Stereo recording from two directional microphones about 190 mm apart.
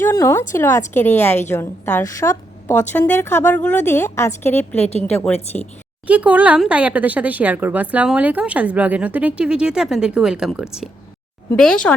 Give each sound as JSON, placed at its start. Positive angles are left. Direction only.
{"t": 0.0, "sound": "a woman's voice", "side_deg": 15}
{"t": 4.8, "sound": "a woman's voice", "side_deg": 35}
{"t": 5.5, "sound": "a woman's voice", "side_deg": 10}
{"t": 6.1, "sound": "speech", "side_deg": -5}